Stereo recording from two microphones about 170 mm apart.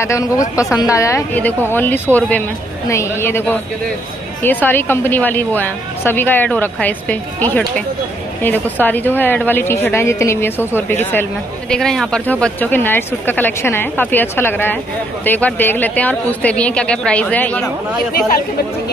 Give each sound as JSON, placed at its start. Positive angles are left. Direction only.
{"t": 0.0, "sound": "a woman's voice", "side_deg": 20}